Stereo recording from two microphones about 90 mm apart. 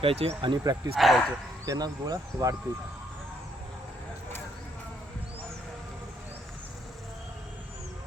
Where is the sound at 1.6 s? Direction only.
45° right (ahead or behind).